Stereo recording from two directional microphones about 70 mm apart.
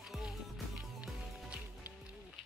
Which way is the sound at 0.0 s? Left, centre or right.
Centre.